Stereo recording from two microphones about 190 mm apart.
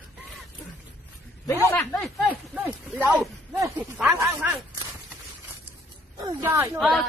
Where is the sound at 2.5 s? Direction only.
10° right (ahead or behind).